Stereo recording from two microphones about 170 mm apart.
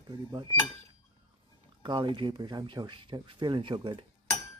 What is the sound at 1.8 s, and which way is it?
Speech, 30° right (ahead or behind).